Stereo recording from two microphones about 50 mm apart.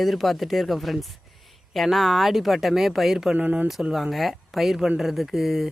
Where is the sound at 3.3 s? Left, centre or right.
Right.